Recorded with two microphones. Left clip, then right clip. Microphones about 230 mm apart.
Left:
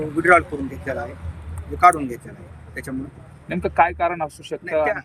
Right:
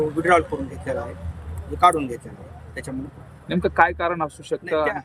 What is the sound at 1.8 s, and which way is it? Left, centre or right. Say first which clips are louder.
Speech: left 2 dB; centre.